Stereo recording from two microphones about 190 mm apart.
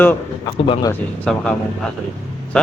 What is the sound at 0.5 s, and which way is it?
Speech, 25° left (ahead or behind).